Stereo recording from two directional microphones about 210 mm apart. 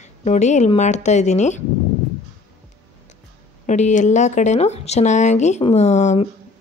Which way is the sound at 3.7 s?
35° left (ahead or behind).